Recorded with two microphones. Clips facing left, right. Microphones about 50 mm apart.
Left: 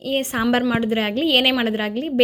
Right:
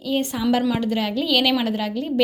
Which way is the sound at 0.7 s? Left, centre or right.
Left.